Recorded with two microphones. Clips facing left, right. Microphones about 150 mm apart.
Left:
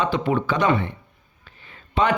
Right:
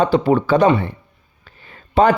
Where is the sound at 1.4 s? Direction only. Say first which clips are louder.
Right 3 dB; 40° right (ahead or behind).